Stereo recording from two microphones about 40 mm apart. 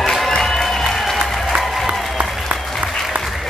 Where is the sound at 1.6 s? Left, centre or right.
Centre.